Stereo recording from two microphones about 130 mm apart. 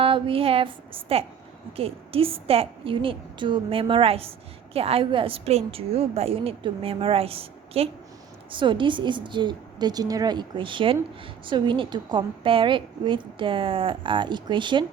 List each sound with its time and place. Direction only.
0.0 s a woman's voice: 45° right (ahead or behind)